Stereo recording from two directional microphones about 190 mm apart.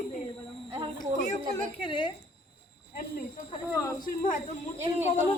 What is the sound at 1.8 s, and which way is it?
Speech, 25° left (ahead or behind).